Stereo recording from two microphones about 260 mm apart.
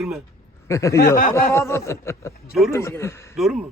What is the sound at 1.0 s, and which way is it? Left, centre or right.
Speech, left.